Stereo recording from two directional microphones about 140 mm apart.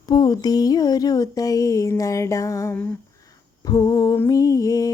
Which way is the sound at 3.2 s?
25° left (ahead or behind).